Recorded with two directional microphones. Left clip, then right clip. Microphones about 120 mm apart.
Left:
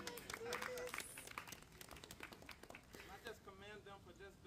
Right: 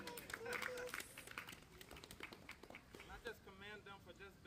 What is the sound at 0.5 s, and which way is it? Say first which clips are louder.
Run: right 1 dB; 10° right (ahead or behind).